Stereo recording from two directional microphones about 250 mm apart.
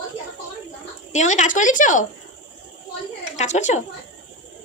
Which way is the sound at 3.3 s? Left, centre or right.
Left.